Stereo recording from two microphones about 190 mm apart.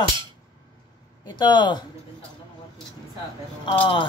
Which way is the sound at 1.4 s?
25° left (ahead or behind).